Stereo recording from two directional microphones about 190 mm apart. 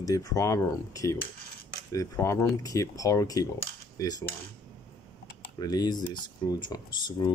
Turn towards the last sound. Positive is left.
turn(degrees=25)  # may be behind; listen again after turning